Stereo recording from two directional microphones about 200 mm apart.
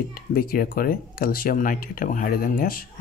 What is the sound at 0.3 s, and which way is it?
Speech, 45° left (ahead or behind).